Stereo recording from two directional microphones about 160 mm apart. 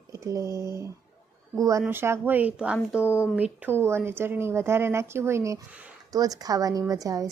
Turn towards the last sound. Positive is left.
turn(degrees=-20)  # may be behind; listen again after turning